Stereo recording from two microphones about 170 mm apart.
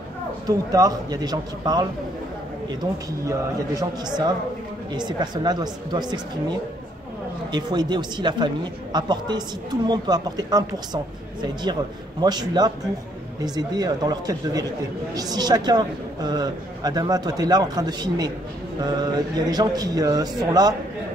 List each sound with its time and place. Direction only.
0.5 s a woman's voice: 20° right (ahead or behind)
7.5 s a woman's voice: 25° right (ahead or behind)
12.2 s a woman's voice: 25° right (ahead or behind)